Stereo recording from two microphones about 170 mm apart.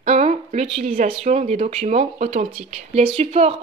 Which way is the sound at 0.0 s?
40° right (ahead or behind).